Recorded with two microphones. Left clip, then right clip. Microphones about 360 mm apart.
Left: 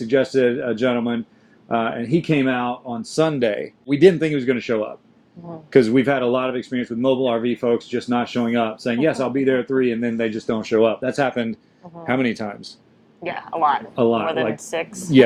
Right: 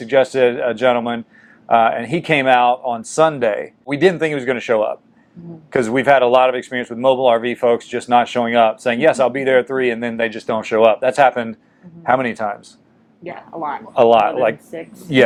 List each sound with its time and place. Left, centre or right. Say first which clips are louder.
0.1 s speech: right 4 dB; right
3.0 s speech: right 1 dB; right
13.2 s speech: left 6 dB; left
13.9 s speech: right 8 dB; right
14.7 s speech: left 5 dB; left